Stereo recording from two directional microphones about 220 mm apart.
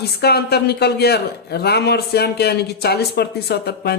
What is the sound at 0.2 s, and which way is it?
A man's voice, 45° left (ahead or behind).